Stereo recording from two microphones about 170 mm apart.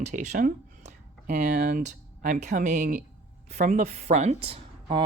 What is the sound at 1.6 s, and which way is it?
Speech, 65° right (ahead or behind).